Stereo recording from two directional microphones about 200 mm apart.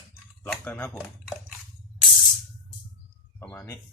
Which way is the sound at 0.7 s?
10° left (ahead or behind).